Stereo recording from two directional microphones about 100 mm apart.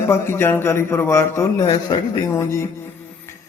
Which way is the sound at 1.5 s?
40° left (ahead or behind).